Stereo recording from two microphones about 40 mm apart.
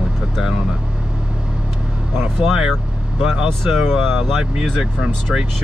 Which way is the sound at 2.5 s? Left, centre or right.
Centre.